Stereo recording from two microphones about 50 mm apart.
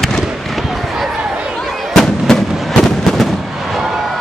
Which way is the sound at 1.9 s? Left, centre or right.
Centre.